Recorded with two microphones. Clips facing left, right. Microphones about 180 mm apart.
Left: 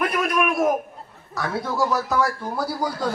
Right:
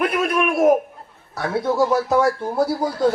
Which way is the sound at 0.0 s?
25° right (ahead or behind).